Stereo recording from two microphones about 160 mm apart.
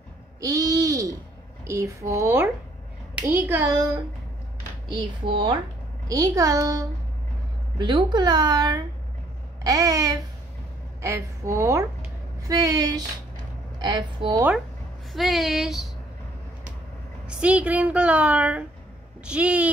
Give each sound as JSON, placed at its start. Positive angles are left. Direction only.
{"t": 0.4, "sound": "a sound", "side_deg": -20}
{"t": 1.7, "sound": "a woman's voice", "side_deg": -20}
{"t": 4.8, "sound": "speech", "side_deg": -30}
{"t": 6.0, "sound": "a woman's voice", "side_deg": -20}
{"t": 15.1, "sound": "speech", "side_deg": 0}
{"t": 17.3, "sound": "a woman's voice", "side_deg": -10}